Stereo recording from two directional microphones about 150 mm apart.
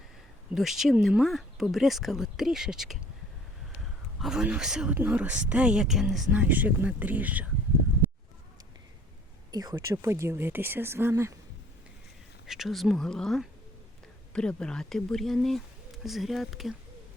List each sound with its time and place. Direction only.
0.5 s speech: centre (ahead or behind)
4.2 s speech: 5° right (ahead or behind)
9.5 s speech: 25° right (ahead or behind)
12.5 s speech: centre (ahead or behind)